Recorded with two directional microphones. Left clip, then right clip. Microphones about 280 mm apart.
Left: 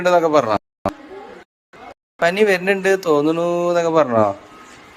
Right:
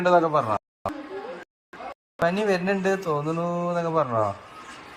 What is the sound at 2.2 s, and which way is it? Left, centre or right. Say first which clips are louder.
Speech: left 8 dB; left.